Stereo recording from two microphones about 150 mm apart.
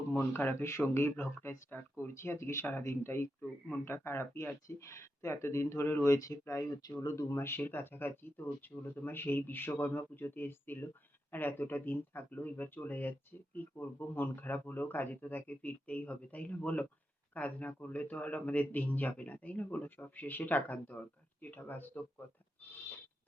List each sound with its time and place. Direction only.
0.1 s speech: 15° left (ahead or behind)